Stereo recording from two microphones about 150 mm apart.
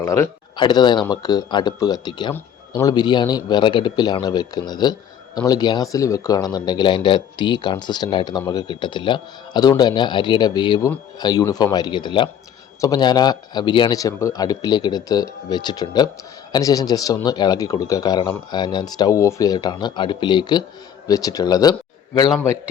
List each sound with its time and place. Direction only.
0.0 s speech: 20° left (ahead or behind)
0.5 s speech: 30° left (ahead or behind)